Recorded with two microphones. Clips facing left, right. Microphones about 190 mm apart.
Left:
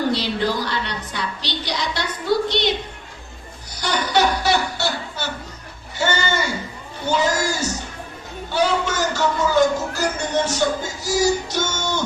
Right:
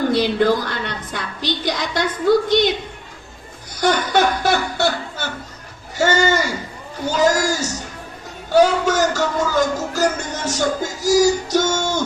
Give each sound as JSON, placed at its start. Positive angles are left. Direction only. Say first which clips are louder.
{"t": 0.1, "sound": "a woman's voice", "louder": "right 6 dB", "side_deg": -50}
{"t": 3.8, "sound": "a sound", "louder": "right 3 dB", "side_deg": -50}
{"t": 7.1, "sound": "a man's voice", "louder": "right 3 dB", "side_deg": -45}